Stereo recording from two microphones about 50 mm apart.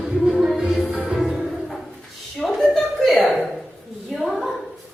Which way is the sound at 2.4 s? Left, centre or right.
Centre.